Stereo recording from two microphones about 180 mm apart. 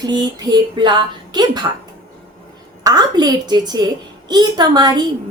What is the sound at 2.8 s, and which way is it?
A woman's voice, 20° right (ahead or behind).